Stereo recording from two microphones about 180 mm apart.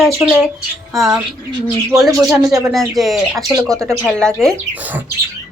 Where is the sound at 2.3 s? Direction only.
20° right (ahead or behind).